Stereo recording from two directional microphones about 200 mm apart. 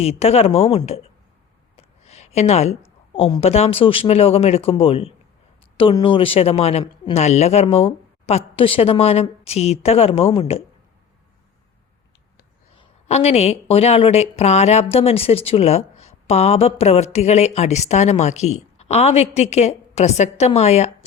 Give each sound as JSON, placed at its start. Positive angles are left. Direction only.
{"t": 0.0, "sound": "a woman's voice", "side_deg": 30}
{"t": 1.7, "sound": "a sound", "side_deg": 30}
{"t": 3.1, "sound": "speech", "side_deg": 25}
{"t": 12.7, "sound": "a woman's voice", "side_deg": 30}